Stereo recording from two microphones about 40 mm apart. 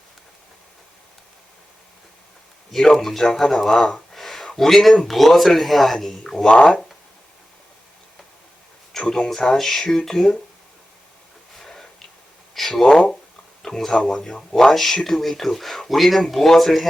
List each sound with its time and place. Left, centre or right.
2.7 s speech: centre
4.1 s a sound: centre
4.5 s speech: centre
9.0 s speech: centre
9.6 s speech: centre
11.6 s a sound: centre
13.7 s speech: centre